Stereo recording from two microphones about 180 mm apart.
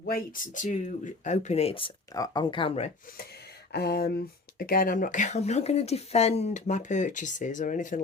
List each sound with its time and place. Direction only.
0.0 s speech: 55° left (ahead or behind); by 2.9 s 35° left (ahead or behind)
3.7 s speech: 60° left (ahead or behind); by 8.0 s 45° left (ahead or behind)